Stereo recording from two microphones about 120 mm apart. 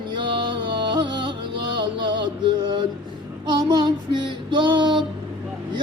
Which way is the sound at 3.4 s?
35° right (ahead or behind).